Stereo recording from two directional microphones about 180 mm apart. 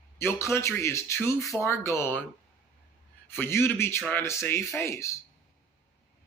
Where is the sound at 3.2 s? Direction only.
15° left (ahead or behind).